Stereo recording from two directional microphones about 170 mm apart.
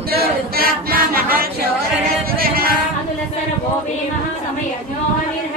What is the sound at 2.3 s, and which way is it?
Music, 60° right (ahead or behind).